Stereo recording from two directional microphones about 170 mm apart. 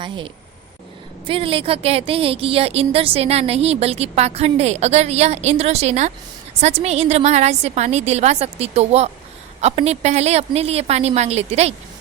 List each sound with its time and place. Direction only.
1.3 s a woman's voice: 30° right (ahead or behind)